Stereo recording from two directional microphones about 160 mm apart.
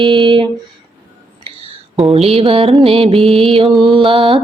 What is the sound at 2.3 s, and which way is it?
Music, 40° right (ahead or behind).